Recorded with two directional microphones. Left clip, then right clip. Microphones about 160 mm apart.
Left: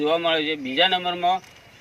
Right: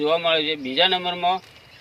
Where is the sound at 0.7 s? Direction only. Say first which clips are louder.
Even; 15° right (ahead or behind).